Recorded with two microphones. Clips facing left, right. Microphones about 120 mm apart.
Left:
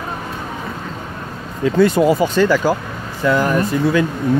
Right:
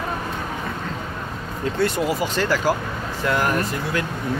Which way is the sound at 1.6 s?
90° left.